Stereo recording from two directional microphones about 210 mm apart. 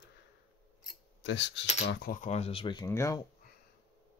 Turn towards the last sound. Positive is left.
turn(degrees=15)  # may be behind; listen again after turning